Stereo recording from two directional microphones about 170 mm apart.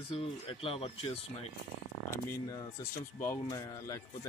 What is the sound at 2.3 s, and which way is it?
A man's voice, 20° left (ahead or behind).